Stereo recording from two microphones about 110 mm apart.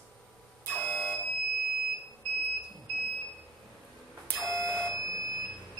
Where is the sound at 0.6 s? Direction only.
20° left (ahead or behind).